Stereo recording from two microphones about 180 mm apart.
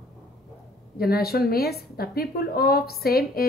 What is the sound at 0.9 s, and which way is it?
A woman's voice, 60° left (ahead or behind).